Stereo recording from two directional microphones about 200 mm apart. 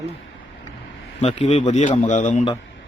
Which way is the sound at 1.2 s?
35° left (ahead or behind).